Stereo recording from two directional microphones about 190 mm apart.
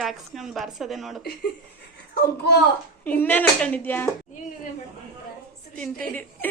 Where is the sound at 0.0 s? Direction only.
Centre (ahead or behind).